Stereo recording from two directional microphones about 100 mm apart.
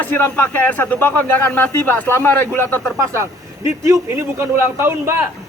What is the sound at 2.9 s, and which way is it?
Speech, 30° right (ahead or behind).